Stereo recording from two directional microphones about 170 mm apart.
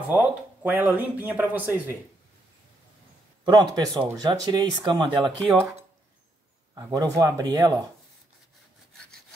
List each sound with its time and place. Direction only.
0.1 s speech: 10° right (ahead or behind)
3.4 s speech: 25° right (ahead or behind)
5.4 s speech: 5° left (ahead or behind)
6.7 s speech: 20° right (ahead or behind)